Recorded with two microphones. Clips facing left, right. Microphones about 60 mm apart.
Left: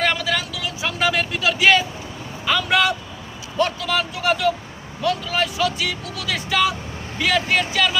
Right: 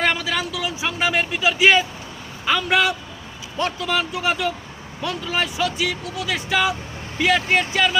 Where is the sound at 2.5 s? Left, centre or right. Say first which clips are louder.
Even; centre.